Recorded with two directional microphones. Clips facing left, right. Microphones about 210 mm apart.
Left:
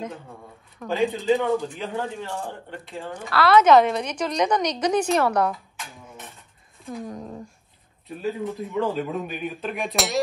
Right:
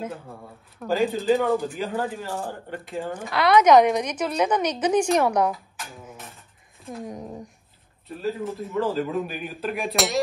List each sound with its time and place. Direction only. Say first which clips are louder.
0.7 s a woman's voice: right 1 dB; centre (ahead or behind)
7.1 s a woman's voice: even; 20° right (ahead or behind)
8.2 s speech: even; centre (ahead or behind)